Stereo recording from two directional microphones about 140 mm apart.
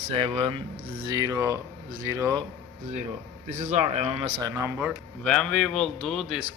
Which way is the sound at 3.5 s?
60° right (ahead or behind).